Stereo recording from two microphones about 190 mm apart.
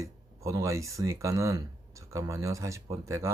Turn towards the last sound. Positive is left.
turn(degrees=-15)  # may be behind; listen again after turning